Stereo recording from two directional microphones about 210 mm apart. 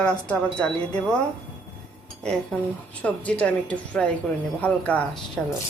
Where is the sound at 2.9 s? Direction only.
5° left (ahead or behind).